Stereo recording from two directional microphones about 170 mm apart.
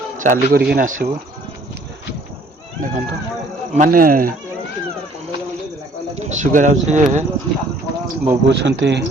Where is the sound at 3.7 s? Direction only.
50° right (ahead or behind).